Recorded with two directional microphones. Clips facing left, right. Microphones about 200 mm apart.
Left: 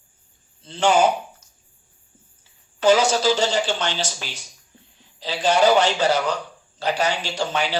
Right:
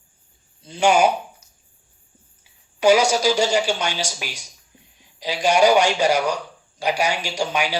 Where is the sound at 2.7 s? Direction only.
10° right (ahead or behind).